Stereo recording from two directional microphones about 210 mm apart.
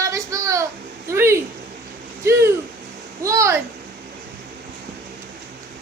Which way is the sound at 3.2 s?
15° right (ahead or behind).